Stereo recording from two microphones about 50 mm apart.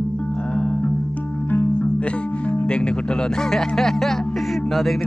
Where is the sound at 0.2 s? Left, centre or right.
Left.